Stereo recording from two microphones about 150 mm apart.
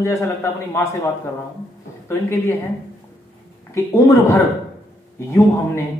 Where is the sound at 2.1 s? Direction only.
15° left (ahead or behind).